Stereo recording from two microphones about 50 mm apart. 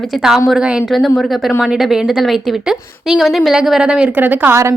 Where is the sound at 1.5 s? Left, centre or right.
Centre.